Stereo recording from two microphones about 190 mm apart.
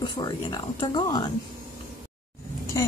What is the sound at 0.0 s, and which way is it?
Speech, 20° left (ahead or behind).